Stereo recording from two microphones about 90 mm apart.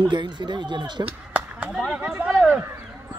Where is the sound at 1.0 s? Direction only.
15° right (ahead or behind).